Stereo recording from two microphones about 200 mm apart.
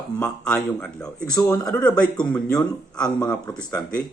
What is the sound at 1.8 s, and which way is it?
Speech, 5° left (ahead or behind).